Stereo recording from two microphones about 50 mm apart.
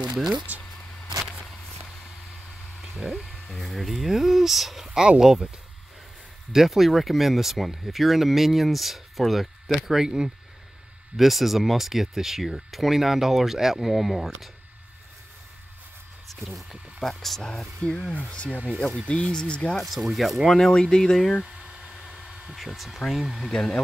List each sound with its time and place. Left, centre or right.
0.5 s speech: right
2.8 s speech: centre
6.5 s speech: centre
9.8 s speech: centre
16.3 s speech: centre
17.5 s speech: centre
18.1 s speech: left
19.8 s speech: centre
20.4 s speech: centre
21.5 s a sound: right
22.6 s speech: centre
23.5 s speech: centre